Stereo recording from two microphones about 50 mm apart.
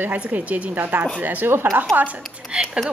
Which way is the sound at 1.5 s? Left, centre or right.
Right.